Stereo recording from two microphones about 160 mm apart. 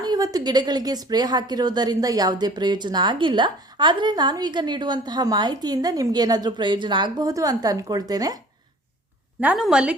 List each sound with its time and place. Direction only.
0.0 s a woman's voice: 25° right (ahead or behind)
9.4 s a woman's voice: 5° right (ahead or behind)